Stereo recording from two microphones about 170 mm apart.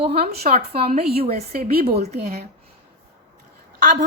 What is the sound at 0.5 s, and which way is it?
Speech, 35° right (ahead or behind).